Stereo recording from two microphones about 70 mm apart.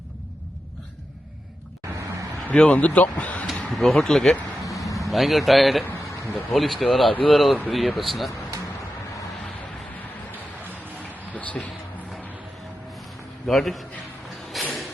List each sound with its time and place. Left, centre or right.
2.5 s speech: centre
3.5 s speech: centre
4.6 s vehicle: left
4.9 s speech: centre
11.1 s a sound: left
13.5 s speech: centre
14.5 s music: centre